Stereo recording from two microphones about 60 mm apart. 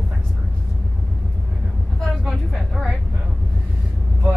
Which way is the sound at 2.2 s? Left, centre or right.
Centre.